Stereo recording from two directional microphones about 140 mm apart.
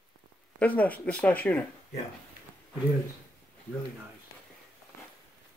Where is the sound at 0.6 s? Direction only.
10° left (ahead or behind).